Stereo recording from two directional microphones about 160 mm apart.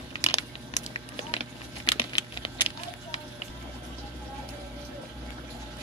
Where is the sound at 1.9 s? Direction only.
30° left (ahead or behind).